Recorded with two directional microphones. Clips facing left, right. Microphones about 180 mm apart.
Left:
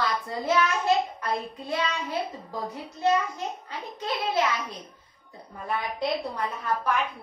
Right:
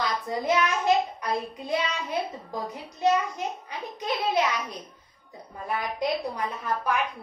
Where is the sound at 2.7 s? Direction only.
15° right (ahead or behind).